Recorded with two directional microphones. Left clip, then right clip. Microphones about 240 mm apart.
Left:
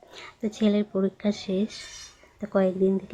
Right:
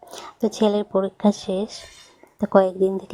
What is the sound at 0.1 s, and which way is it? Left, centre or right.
A woman's voice, right.